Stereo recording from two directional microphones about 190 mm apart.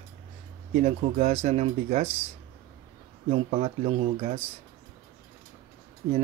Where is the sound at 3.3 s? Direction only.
30° right (ahead or behind).